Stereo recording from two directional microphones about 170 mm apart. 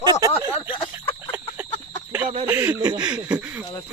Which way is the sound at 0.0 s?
20° right (ahead or behind).